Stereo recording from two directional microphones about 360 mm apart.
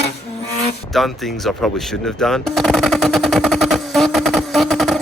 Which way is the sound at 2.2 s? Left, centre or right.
Centre.